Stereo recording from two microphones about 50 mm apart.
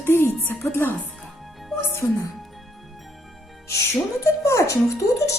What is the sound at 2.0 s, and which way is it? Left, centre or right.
Speech, left.